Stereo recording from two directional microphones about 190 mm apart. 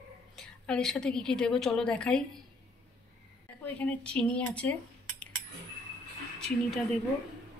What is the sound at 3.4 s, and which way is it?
Speech, 5° left (ahead or behind).